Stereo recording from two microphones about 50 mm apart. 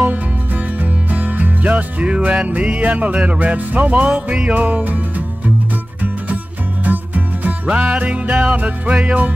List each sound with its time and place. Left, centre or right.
1.1 s music: right
6.8 s music: right